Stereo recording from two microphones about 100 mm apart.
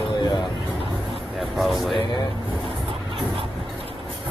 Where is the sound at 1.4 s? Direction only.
Centre (ahead or behind).